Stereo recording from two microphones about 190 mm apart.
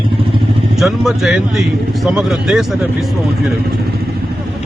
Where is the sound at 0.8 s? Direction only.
Centre (ahead or behind).